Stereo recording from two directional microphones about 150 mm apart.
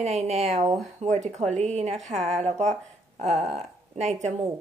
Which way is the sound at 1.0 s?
50° right (ahead or behind).